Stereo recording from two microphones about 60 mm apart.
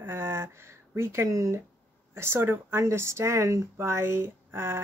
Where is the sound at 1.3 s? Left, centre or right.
Right.